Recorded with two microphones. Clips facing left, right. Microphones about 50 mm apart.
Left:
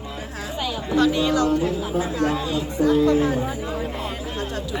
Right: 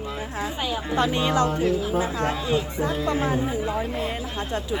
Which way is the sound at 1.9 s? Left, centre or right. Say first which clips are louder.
Left 2 dB; right.